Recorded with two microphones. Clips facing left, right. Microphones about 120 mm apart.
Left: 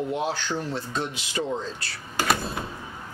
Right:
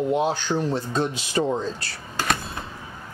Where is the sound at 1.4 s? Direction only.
45° right (ahead or behind).